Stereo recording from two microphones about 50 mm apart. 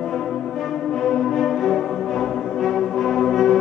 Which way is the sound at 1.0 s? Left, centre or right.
Centre.